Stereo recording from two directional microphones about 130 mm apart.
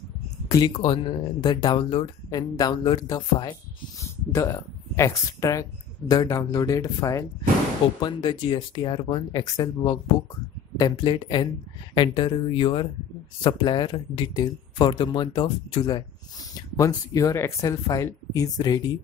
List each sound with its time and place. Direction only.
0.5 s speech: 30° left (ahead or behind)
2.3 s speech: 30° left (ahead or behind)
4.0 s speech: 20° left (ahead or behind); by 16.0 s 40° left (ahead or behind)
16.5 s speech: 25° left (ahead or behind)